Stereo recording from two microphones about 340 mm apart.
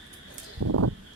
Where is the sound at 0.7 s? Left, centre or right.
Right.